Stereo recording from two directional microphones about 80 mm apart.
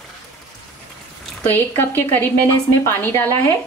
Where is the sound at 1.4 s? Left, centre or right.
Left.